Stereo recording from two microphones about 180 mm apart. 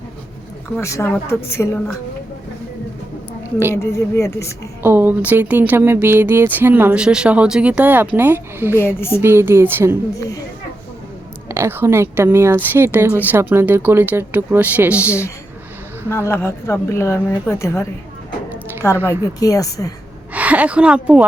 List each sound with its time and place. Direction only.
0.8 s speech: 15° left (ahead or behind)
3.8 s speech: 15° left (ahead or behind)
4.8 s speech: 10° right (ahead or behind)
8.7 s speech: 15° left (ahead or behind)
9.2 s speech: 15° right (ahead or behind)
11.4 s speech: 15° right (ahead or behind)
16.0 s speech: 15° left (ahead or behind)
19.4 s a woman's voice: 20° left (ahead or behind)
20.3 s a woman's voice: 10° right (ahead or behind)